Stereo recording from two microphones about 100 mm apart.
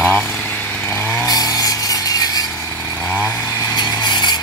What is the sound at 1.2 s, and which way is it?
Chainsaw, 40° left (ahead or behind).